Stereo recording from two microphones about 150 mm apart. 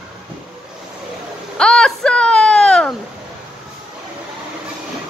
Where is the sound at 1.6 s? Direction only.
5° left (ahead or behind).